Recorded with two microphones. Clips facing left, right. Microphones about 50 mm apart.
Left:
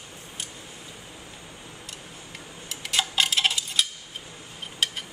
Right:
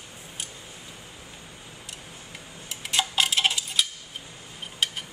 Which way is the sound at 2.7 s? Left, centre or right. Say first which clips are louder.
Even; centre.